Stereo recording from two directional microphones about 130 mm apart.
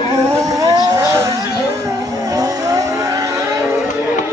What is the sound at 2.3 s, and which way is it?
Vehicle, 30° right (ahead or behind).